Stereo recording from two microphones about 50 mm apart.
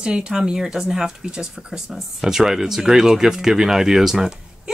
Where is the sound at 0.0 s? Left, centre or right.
Centre.